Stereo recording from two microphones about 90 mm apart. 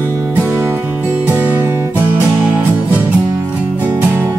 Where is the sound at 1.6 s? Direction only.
30° right (ahead or behind).